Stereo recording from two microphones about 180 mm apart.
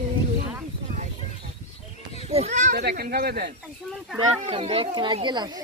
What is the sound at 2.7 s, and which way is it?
Speech, 60° right (ahead or behind).